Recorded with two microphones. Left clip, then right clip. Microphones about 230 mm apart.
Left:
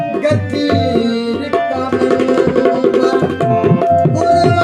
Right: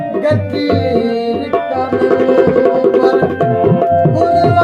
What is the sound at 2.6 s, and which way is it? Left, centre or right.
Tabla, left.